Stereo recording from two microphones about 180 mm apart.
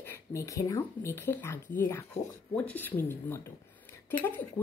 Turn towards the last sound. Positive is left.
turn(degrees=10)  # may be behind; listen again after turning